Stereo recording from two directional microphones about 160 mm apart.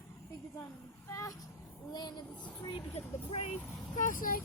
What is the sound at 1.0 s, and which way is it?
Speech, 20° left (ahead or behind).